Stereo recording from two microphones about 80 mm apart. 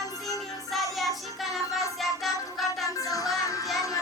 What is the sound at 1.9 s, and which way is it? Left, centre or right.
Music, centre.